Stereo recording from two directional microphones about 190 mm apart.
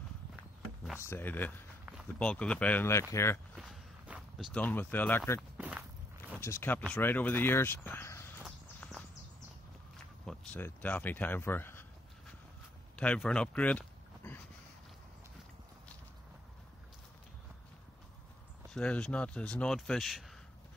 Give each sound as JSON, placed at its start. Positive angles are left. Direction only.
{"t": 0.9, "sound": "speech", "side_deg": 15}
{"t": 3.5, "sound": "walk", "side_deg": -5}
{"t": 4.6, "sound": "speech", "side_deg": 10}
{"t": 5.6, "sound": "walk", "side_deg": -5}
{"t": 6.3, "sound": "speech", "side_deg": 10}
{"t": 8.4, "sound": "a sound", "side_deg": 0}
{"t": 10.2, "sound": "speech", "side_deg": 5}
{"t": 12.9, "sound": "a sound", "side_deg": 5}
{"t": 18.7, "sound": "speech", "side_deg": 5}